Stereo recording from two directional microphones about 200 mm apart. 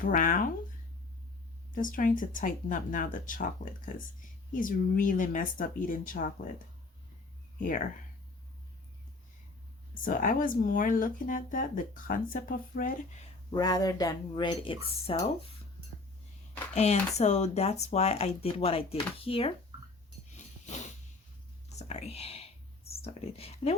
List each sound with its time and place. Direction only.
0.0 s speech: 40° left (ahead or behind)
1.7 s speech: 40° left (ahead or behind)
10.0 s speech: 40° left (ahead or behind)
13.5 s speech: 20° left (ahead or behind)
16.7 s speech: 35° left (ahead or behind)
20.3 s a sound: 35° left (ahead or behind)
21.7 s whispering: 35° left (ahead or behind)